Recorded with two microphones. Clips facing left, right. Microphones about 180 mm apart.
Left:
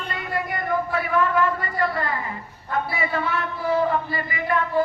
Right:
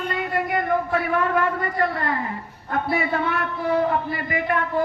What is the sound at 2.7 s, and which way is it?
A man's voice, 60° right (ahead or behind).